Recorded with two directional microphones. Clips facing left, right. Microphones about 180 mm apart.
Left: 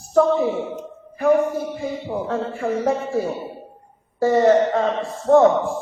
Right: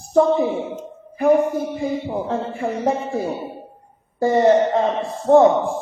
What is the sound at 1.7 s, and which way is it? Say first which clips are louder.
Speech: right 3 dB; 15° right (ahead or behind).